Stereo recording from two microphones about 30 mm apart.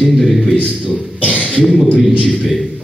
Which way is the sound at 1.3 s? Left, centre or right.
Left.